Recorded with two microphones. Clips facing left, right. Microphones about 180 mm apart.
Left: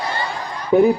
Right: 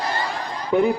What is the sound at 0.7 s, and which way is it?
Speech, 35° left (ahead or behind).